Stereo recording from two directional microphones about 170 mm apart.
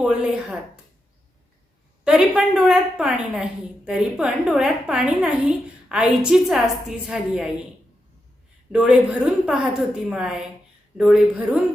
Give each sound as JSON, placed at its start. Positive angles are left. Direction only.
{"t": 0.0, "sound": "a woman's voice", "side_deg": -5}
{"t": 2.0, "sound": "a woman's voice", "side_deg": -5}
{"t": 8.7, "sound": "a woman's voice", "side_deg": -5}